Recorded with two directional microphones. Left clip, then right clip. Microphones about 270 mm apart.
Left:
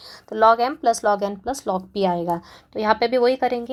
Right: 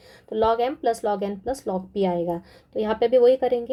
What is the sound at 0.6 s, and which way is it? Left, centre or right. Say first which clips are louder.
Speech: left 3 dB; left.